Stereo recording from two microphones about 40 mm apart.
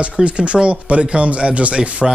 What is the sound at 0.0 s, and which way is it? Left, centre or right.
Speech, right.